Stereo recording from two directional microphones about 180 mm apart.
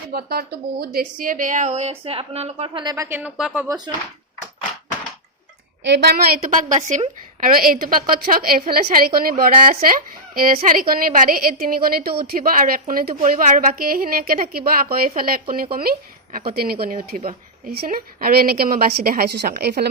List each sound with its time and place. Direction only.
0.1 s a woman's voice: 60° right (ahead or behind); by 3.7 s 5° right (ahead or behind)
3.7 s speech: 25° right (ahead or behind)
5.8 s a woman's voice: 70° right (ahead or behind)